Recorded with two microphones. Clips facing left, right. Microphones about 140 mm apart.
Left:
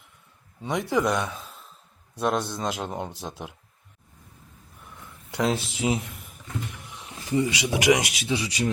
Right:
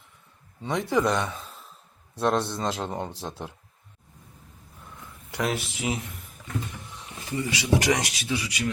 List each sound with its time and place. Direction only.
0.6 s speech: 10° left (ahead or behind)
1.0 s a sound: 5° left (ahead or behind)
2.1 s speech: 5° left (ahead or behind)
5.3 s speech: 25° left (ahead or behind)
7.3 s speech: 20° left (ahead or behind)